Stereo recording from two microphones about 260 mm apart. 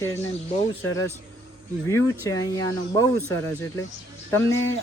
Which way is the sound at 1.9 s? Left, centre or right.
Centre.